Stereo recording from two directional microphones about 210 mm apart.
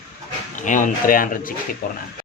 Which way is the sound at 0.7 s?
40° left (ahead or behind).